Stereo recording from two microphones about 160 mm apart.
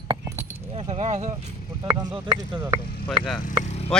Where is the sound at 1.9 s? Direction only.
25° right (ahead or behind).